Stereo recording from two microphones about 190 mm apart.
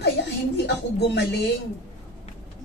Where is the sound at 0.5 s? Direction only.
65° left (ahead or behind).